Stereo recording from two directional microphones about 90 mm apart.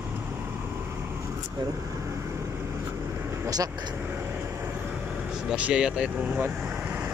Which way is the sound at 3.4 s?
45° right (ahead or behind).